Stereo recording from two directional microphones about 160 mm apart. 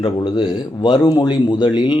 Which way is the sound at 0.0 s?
30° left (ahead or behind).